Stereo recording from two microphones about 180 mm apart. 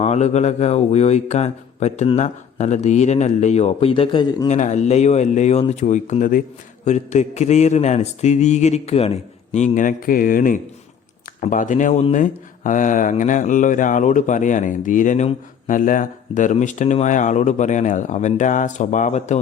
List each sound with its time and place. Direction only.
0.0 s speech: 40° left (ahead or behind)
4.4 s speech: 40° left (ahead or behind)